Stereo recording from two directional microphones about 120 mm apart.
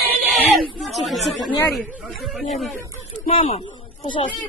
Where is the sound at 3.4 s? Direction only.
90° left.